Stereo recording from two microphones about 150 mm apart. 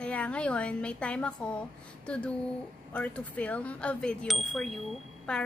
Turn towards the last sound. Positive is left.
turn(degrees=5)  # may be behind; listen again after turning